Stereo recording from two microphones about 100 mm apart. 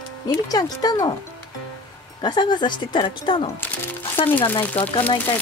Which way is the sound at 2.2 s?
50° left (ahead or behind).